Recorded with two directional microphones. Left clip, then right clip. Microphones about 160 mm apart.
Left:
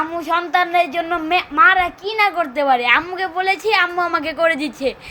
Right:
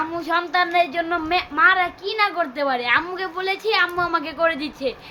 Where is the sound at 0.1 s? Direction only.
15° left (ahead or behind).